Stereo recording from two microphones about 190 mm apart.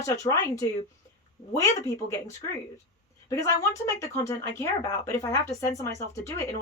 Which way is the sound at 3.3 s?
15° left (ahead or behind).